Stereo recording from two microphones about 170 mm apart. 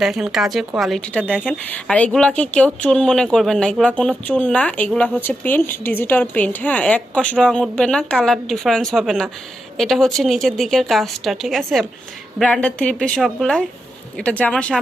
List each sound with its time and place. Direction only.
0.0 s a woman's voice: centre (ahead or behind)